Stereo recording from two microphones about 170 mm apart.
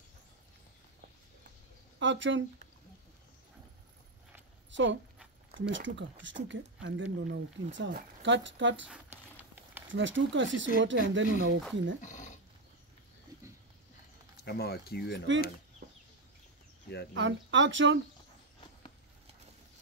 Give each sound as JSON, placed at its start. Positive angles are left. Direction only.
{"t": 2.0, "sound": "speech", "side_deg": -90}
{"t": 4.6, "sound": "a sound", "side_deg": -90}
{"t": 5.7, "sound": "speech", "side_deg": -90}
{"t": 8.8, "sound": "a sound", "side_deg": -10}
{"t": 9.8, "sound": "speech", "side_deg": -90}
{"t": 12.0, "sound": "speech", "side_deg": 45}
{"t": 14.4, "sound": "speech", "side_deg": 70}
{"t": 15.8, "sound": "chicken", "side_deg": -70}
{"t": 17.1, "sound": "speech", "side_deg": -90}